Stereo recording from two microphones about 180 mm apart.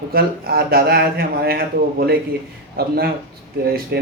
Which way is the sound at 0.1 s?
60° right (ahead or behind).